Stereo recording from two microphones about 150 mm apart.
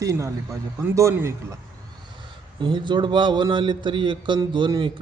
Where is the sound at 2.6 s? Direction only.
30° right (ahead or behind).